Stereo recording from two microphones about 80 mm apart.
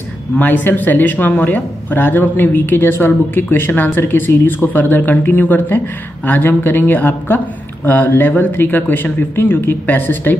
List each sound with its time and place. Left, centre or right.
0.4 s speech: left